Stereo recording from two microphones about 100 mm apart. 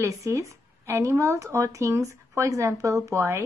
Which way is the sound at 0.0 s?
30° right (ahead or behind).